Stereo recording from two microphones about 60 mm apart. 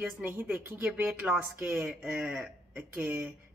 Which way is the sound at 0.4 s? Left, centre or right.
Right.